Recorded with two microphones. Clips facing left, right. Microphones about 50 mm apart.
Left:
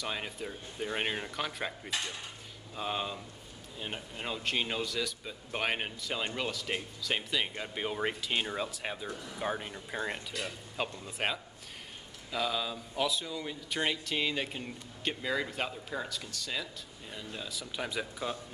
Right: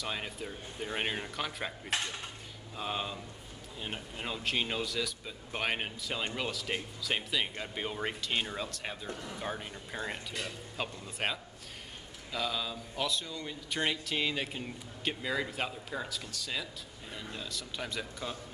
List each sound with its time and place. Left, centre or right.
0.0 s a man's voice: centre
2.7 s a man's voice: centre